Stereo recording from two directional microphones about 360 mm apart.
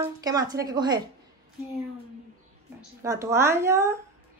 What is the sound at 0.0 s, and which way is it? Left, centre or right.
Speech, centre.